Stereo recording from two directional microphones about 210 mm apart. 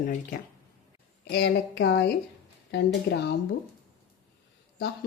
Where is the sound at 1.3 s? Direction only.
50° left (ahead or behind).